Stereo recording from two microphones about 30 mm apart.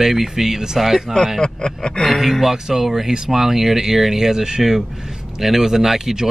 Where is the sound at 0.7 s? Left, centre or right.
Centre.